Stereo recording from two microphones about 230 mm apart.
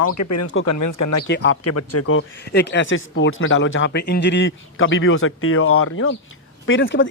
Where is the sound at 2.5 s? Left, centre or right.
Left.